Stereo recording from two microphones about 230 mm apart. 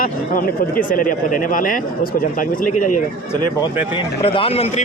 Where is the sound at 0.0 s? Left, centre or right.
Left.